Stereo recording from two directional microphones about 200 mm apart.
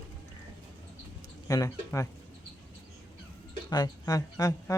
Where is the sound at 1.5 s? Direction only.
15° left (ahead or behind).